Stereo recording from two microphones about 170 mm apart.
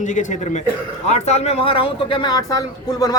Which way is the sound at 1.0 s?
40° left (ahead or behind).